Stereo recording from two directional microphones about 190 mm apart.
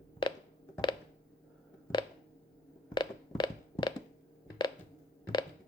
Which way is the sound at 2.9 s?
25° left (ahead or behind).